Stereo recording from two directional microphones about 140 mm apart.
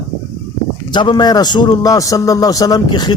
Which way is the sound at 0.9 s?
35° left (ahead or behind).